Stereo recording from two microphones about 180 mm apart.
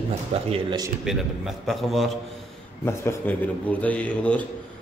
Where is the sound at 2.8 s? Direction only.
15° left (ahead or behind).